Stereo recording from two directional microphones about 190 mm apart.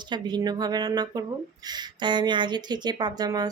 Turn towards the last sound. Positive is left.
turn(degrees=-20)  # may be behind; listen again after turning